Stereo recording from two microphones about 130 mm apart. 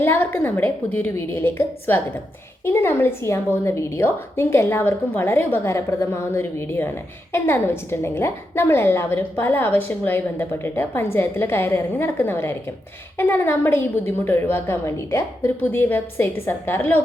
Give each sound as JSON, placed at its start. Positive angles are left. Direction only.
{"t": 0.0, "sound": "a woman's voice", "side_deg": 15}